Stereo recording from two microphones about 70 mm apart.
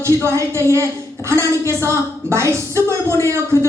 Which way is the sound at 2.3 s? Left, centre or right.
Right.